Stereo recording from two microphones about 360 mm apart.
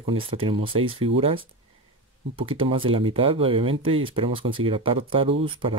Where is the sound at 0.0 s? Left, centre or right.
Centre.